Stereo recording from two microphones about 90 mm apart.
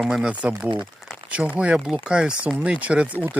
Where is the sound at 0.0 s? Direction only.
5° right (ahead or behind).